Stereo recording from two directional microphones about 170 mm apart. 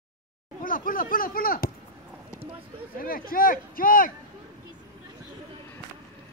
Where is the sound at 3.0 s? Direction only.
60° left (ahead or behind).